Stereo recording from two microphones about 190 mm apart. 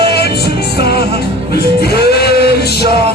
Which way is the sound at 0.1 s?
55° left (ahead or behind).